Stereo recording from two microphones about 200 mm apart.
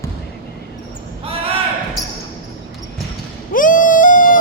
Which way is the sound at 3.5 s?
40° left (ahead or behind).